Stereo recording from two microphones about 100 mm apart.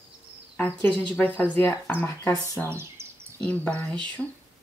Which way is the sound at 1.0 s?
20° left (ahead or behind).